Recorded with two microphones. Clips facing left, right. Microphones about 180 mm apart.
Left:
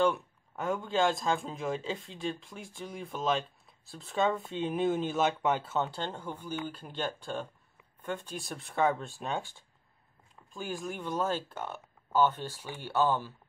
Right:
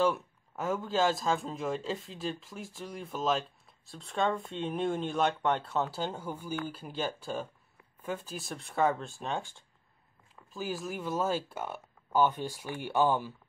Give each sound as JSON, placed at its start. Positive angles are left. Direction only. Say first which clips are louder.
{"t": 0.0, "sound": "speech", "louder": "left 1 dB", "side_deg": 0}